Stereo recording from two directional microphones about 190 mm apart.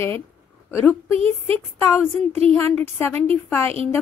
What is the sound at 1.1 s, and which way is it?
Speech, 30° right (ahead or behind).